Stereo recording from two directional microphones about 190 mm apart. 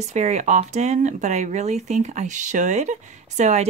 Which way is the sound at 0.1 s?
40° right (ahead or behind).